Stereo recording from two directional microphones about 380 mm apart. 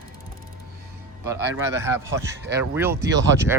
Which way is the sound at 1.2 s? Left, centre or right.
Centre.